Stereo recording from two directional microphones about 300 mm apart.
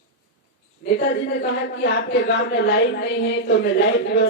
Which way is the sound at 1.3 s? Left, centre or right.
Left.